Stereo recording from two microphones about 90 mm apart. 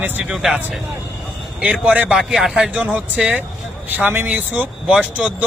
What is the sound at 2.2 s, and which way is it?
Speech, 5° right (ahead or behind).